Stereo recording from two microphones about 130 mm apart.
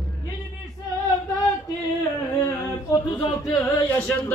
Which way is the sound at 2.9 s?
25° left (ahead or behind).